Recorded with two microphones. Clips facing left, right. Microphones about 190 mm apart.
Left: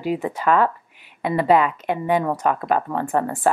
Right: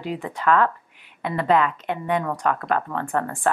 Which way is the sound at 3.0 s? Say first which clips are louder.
Left 4 dB; 20° left (ahead or behind).